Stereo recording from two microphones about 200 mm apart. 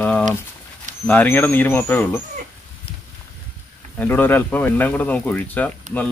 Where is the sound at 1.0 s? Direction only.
10° left (ahead or behind).